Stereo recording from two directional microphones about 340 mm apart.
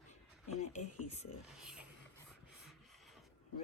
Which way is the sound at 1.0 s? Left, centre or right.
Centre.